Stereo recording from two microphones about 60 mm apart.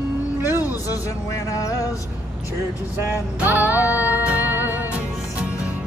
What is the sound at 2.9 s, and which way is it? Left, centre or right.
Music, right.